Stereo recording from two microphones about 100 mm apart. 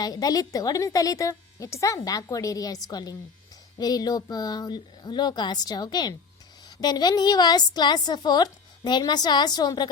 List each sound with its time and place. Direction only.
0.0 s a woman's voice: 40° left (ahead or behind)